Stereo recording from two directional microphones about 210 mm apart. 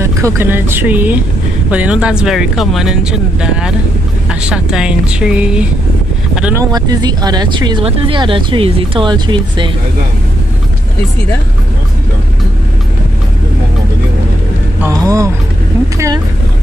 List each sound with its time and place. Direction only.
0.0 s speech: 15° right (ahead or behind)
6.7 s speech: 20° right (ahead or behind)
14.8 s vehicle: 15° right (ahead or behind)